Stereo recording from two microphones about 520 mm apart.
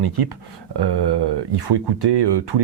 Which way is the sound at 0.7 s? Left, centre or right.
Right.